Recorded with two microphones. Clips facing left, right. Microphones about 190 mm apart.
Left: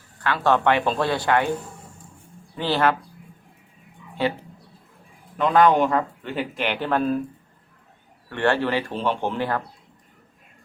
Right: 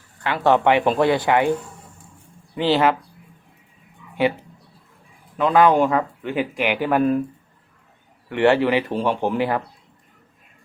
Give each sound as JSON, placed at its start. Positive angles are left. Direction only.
{"t": 0.2, "sound": "speech", "side_deg": -20}
{"t": 2.6, "sound": "speech", "side_deg": -15}
{"t": 5.4, "sound": "speech", "side_deg": -10}
{"t": 8.3, "sound": "speech", "side_deg": -15}